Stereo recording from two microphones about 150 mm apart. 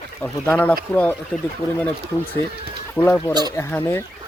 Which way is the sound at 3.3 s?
25° right (ahead or behind).